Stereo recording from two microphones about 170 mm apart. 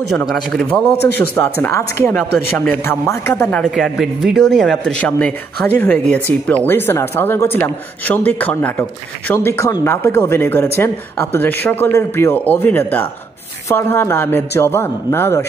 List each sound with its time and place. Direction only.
0.2 s a man's voice: centre (ahead or behind)